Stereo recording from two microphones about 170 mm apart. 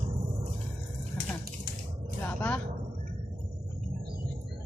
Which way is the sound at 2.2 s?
10° left (ahead or behind).